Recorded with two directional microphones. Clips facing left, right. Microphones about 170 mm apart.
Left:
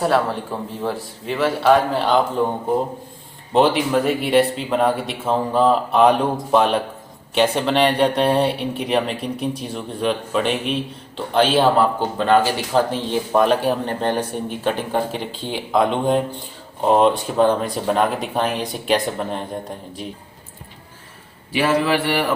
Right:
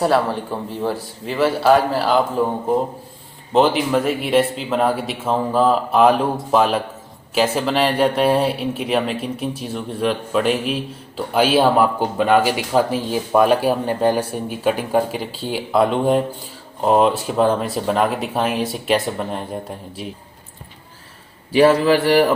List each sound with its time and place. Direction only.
0.0 s speech: centre (ahead or behind)
3.5 s speech: centre (ahead or behind)
21.5 s speech: 35° right (ahead or behind)